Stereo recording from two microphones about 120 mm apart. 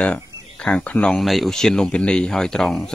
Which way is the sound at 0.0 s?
10° left (ahead or behind).